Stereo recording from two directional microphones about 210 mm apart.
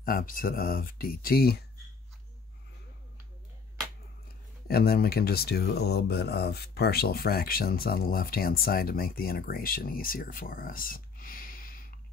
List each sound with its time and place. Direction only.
0.0 s speech: 45° left (ahead or behind)
4.6 s speech: 45° left (ahead or behind)